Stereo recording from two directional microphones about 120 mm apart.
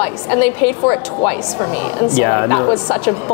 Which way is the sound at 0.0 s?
20° left (ahead or behind).